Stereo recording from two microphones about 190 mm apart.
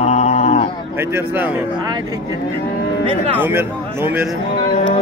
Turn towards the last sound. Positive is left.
turn(degrees=35)  # may be behind; listen again after turning